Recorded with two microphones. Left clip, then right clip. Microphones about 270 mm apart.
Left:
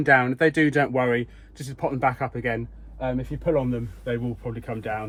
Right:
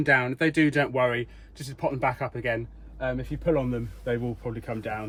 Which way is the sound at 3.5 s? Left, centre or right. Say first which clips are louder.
Left 2 dB; centre.